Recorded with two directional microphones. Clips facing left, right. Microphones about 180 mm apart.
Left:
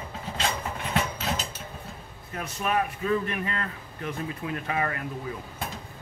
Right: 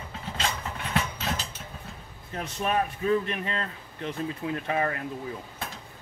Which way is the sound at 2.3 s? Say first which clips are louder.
Even; 30° right (ahead or behind).